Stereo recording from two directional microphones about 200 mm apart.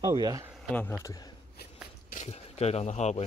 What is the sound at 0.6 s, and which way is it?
Speech, 10° left (ahead or behind).